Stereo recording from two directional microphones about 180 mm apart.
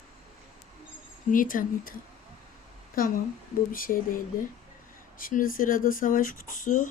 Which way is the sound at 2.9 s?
50° left (ahead or behind).